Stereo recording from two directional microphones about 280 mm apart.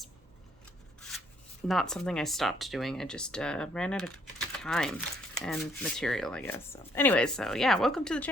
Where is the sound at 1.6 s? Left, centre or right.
Centre.